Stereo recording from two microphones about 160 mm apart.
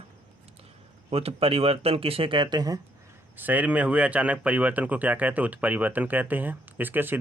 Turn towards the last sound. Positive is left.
turn(degrees=-10)  # may be behind; listen again after turning